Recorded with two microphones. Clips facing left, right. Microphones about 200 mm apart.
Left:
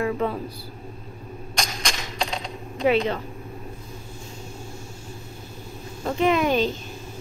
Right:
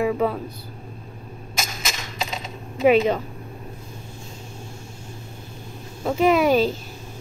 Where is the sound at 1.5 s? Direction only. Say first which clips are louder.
Left 1 dB; 5° right (ahead or behind).